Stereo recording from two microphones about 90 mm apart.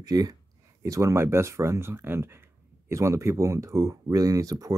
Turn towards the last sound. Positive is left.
turn(degrees=-40)  # may be behind; listen again after turning